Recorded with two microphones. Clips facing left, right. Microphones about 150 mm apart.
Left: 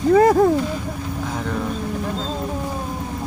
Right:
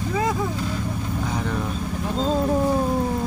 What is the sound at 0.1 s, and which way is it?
Speech, 55° left (ahead or behind).